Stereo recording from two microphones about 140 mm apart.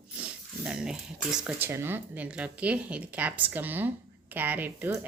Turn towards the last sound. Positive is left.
turn(degrees=-15)  # may be behind; listen again after turning